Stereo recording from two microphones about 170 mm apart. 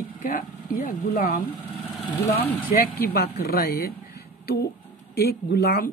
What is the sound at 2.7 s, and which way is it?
Speech, 60° left (ahead or behind).